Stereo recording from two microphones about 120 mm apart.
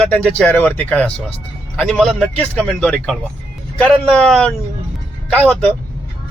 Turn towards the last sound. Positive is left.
turn(degrees=10)  # may be behind; listen again after turning